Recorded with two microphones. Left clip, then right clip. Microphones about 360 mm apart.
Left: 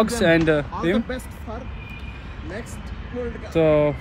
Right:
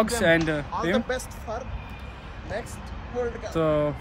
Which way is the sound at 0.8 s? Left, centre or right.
Right.